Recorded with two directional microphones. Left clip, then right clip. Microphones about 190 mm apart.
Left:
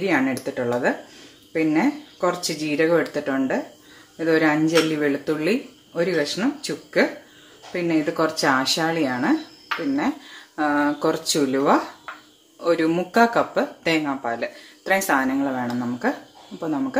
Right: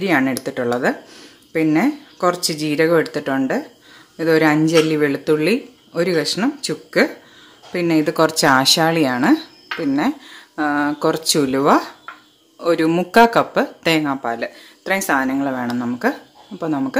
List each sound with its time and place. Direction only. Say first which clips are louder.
0.0 s speech: right 4 dB; 40° right (ahead or behind)
10.5 s speech: right 2 dB; 35° right (ahead or behind)